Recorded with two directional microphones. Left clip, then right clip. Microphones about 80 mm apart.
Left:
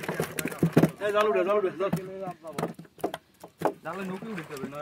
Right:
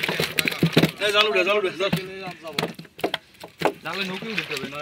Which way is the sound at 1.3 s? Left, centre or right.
Centre.